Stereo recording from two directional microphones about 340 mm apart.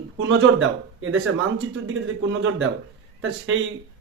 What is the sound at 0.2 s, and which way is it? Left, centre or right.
Speech, right.